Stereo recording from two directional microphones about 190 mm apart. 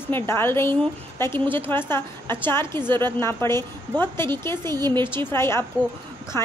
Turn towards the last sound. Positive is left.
turn(degrees=15)  # may be behind; listen again after turning